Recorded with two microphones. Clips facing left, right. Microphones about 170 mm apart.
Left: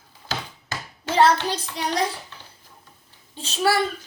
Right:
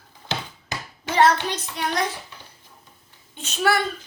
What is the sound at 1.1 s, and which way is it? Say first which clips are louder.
Speech: even; 30° left (ahead or behind).